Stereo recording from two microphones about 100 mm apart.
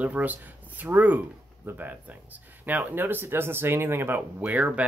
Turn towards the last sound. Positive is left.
turn(degrees=-15)  # may be behind; listen again after turning